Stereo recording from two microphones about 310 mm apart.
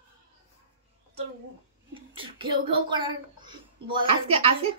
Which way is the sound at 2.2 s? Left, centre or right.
Centre.